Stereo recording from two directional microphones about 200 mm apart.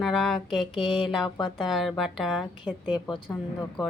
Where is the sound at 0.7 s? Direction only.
25° left (ahead or behind).